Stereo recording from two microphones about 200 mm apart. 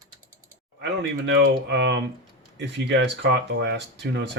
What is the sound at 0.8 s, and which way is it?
Speech, 65° right (ahead or behind).